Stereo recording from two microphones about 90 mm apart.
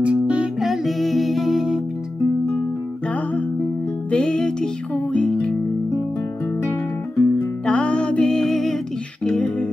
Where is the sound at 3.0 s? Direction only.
15° left (ahead or behind).